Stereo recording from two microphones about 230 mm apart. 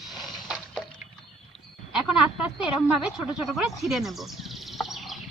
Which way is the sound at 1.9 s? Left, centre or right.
Centre.